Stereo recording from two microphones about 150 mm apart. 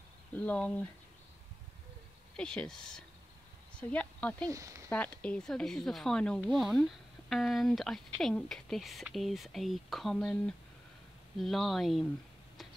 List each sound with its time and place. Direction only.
0.3 s speech: 10° left (ahead or behind)
2.3 s speech: 5° left (ahead or behind)
4.5 s speech: 20° right (ahead or behind)
4.8 s speech: 10° left (ahead or behind)